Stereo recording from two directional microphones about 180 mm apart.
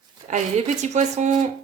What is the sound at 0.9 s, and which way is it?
Speech, 40° right (ahead or behind).